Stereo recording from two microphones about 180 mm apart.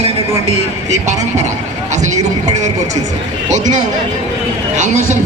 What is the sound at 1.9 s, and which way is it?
Speech, 40° right (ahead or behind).